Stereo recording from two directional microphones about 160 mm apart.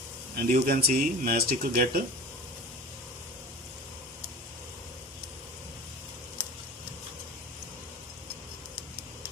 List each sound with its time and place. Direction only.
0.4 s speech: 60° right (ahead or behind)